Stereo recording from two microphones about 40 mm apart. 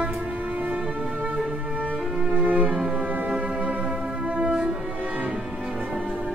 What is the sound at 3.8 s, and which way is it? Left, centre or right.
Music, right.